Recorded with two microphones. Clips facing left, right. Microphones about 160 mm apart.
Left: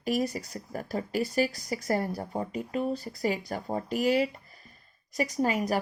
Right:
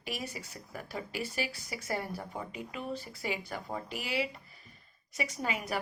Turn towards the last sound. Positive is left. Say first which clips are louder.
# left 8 dB
turn(degrees=40)  # may be behind; listen again after turning